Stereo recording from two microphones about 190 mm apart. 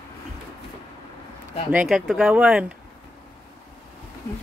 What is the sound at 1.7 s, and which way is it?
Speech, 5° right (ahead or behind).